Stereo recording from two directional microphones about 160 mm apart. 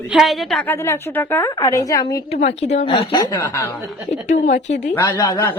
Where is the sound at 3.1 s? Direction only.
20° left (ahead or behind).